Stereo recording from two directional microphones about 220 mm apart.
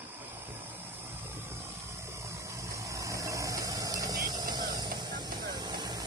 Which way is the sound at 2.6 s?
15° right (ahead or behind).